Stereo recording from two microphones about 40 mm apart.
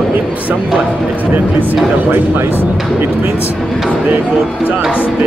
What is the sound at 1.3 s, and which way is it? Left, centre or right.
Speech, right.